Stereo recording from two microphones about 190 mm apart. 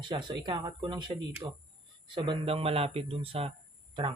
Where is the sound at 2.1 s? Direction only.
25° right (ahead or behind).